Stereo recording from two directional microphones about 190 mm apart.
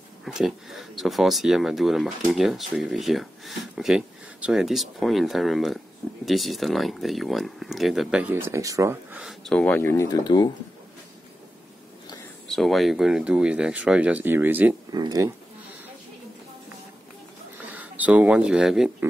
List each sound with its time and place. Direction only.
0.2 s speech: centre (ahead or behind)
9.2 s speech: centre (ahead or behind); by 10.5 s 20° left (ahead or behind)
12.4 s speech: centre (ahead or behind)
14.9 s speech: 20° right (ahead or behind)
17.6 s speech: 10° right (ahead or behind)